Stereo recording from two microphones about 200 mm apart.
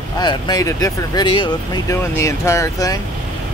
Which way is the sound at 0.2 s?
20° left (ahead or behind).